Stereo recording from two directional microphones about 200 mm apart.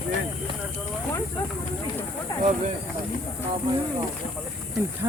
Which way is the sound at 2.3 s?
15° left (ahead or behind).